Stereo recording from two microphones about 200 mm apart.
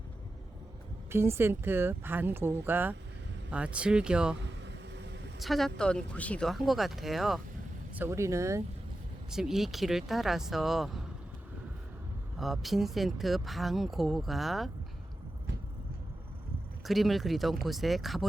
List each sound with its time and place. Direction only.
1.1 s speech: 10° right (ahead or behind)
4.4 s vehicle: 60° right (ahead or behind)
5.4 s speech: centre (ahead or behind)
7.9 s speech: 10° right (ahead or behind)
9.3 s speech: centre (ahead or behind)
12.4 s speech: centre (ahead or behind)
16.8 s speech: centre (ahead or behind)